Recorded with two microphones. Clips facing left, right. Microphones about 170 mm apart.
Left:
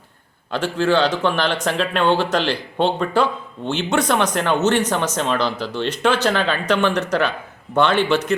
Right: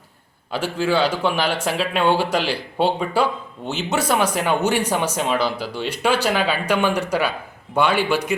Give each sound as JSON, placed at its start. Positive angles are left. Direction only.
{"t": 0.5, "sound": "speech", "side_deg": -10}